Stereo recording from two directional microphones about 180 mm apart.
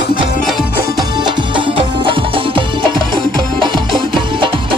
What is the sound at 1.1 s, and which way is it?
Music, 25° right (ahead or behind).